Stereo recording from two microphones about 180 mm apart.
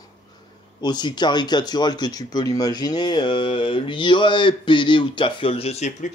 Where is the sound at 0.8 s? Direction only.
25° left (ahead or behind).